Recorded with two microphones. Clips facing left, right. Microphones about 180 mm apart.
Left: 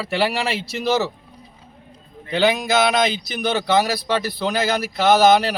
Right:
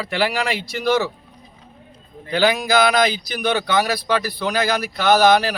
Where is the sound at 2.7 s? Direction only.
25° left (ahead or behind).